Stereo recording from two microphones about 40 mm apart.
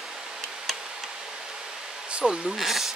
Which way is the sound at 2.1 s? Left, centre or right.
Right.